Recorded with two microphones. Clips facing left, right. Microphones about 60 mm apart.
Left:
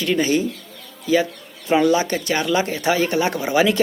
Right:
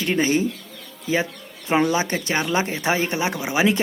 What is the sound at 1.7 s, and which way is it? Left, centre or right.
Speech, right.